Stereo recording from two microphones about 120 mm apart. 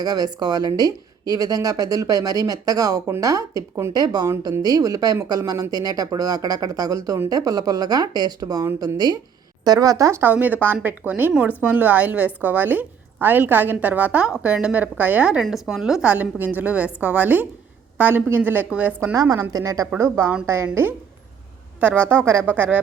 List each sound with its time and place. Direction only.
0.0 s a woman's voice: 35° right (ahead or behind); by 19.1 s 15° right (ahead or behind)
19.1 s a woman's voice: 30° right (ahead or behind)